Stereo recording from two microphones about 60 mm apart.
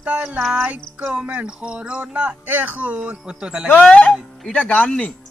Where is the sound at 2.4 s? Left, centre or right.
Right; by 3.7 s centre.